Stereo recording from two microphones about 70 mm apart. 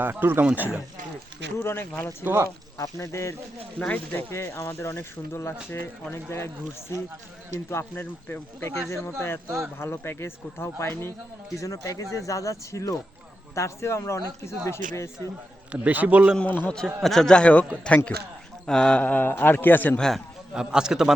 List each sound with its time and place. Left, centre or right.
0.0 s a man's voice: right
1.5 s speech: left
2.2 s speech: right
2.7 s speech: left
3.8 s a man's voice: centre
4.1 s speech: left
7.7 s speech: left
11.5 s a man's voice: left
15.7 s a man's voice: right
16.6 s a man's voice: centre; by 20.0 s left
20.0 s a man's voice: centre
20.5 s a man's voice: centre